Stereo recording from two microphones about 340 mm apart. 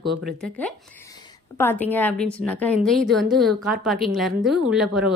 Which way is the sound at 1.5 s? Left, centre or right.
Centre.